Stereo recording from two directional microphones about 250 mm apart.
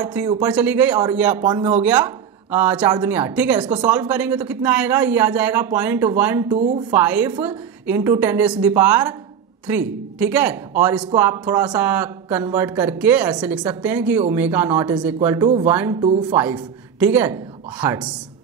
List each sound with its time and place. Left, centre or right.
0.0 s a woman's voice: centre
6.5 s a woman's voice: right
6.9 s speech: centre
16.0 s speech: centre
17.0 s speech: centre